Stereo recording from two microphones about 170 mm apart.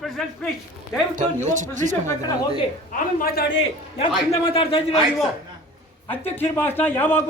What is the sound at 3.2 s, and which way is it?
Speech, 80° left.